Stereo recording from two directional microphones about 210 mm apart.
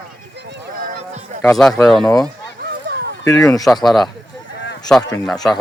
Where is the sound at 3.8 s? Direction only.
Centre (ahead or behind).